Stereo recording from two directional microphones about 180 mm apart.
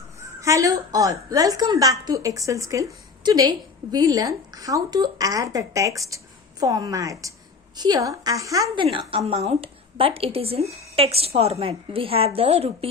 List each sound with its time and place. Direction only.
0.3 s a woman's voice: 20° right (ahead or behind); by 12.9 s 35° right (ahead or behind)